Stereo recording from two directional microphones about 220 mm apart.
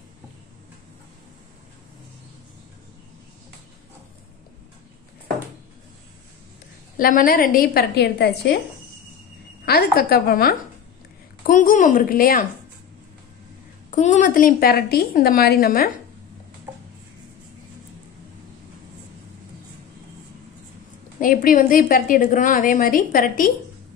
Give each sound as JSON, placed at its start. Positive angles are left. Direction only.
{"t": 7.0, "sound": "a woman's voice", "side_deg": 40}
{"t": 9.7, "sound": "a woman's voice", "side_deg": 45}
{"t": 13.8, "sound": "a woman's voice", "side_deg": 35}
{"t": 21.2, "sound": "a woman's voice", "side_deg": 40}